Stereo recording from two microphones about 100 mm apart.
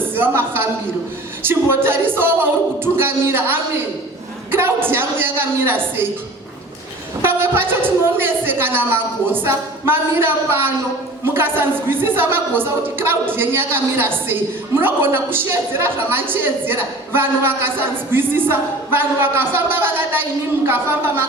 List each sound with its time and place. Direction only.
0.2 s a sound: 20° right (ahead or behind)
1.4 s a woman's voice: 20° right (ahead or behind)
7.2 s a woman's voice: 20° right (ahead or behind)